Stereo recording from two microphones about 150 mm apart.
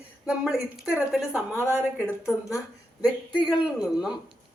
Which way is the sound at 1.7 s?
15° left (ahead or behind).